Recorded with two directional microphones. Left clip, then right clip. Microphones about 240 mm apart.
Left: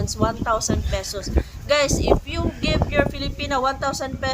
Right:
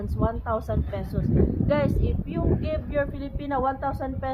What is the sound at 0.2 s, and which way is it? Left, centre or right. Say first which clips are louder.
A woman's voice: left 5 dB; centre.